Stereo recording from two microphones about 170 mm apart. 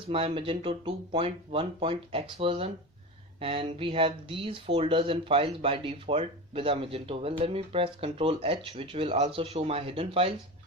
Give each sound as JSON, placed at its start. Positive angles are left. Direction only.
{"t": 0.1, "sound": "speech", "side_deg": -35}